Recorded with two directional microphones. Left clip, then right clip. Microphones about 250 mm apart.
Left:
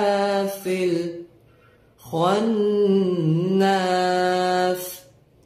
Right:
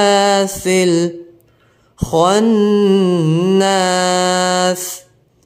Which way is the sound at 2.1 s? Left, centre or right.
Right.